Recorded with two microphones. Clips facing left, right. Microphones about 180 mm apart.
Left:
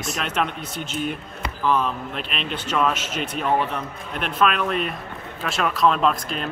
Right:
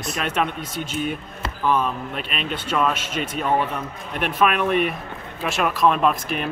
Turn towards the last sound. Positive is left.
turn(degrees=-5)  # may be behind; listen again after turning